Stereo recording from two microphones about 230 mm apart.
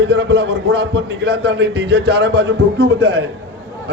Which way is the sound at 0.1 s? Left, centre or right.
Right.